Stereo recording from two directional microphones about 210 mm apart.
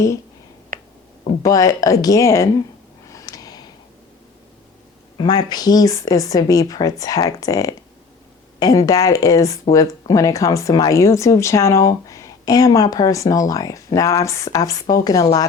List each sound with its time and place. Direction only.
0.7 s finger snapping: 40° right (ahead or behind)
1.4 s speech: 15° left (ahead or behind)
3.1 s a sound: 15° left (ahead or behind)
5.1 s speech: 20° left (ahead or behind)